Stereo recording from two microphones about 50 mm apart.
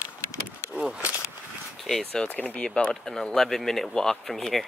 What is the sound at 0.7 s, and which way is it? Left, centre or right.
Speech, right.